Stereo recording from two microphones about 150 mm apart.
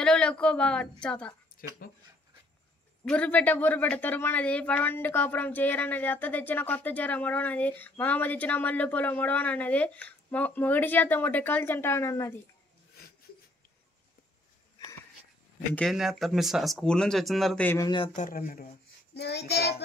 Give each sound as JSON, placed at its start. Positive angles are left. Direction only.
{"t": 0.0, "sound": "speech", "side_deg": 5}
{"t": 1.8, "sound": "speech", "side_deg": 85}
{"t": 3.1, "sound": "speech", "side_deg": 10}
{"t": 15.7, "sound": "speech", "side_deg": 0}
{"t": 17.8, "sound": "speech", "side_deg": 35}
{"t": 18.1, "sound": "speech", "side_deg": 60}
{"t": 19.1, "sound": "child singing", "side_deg": 90}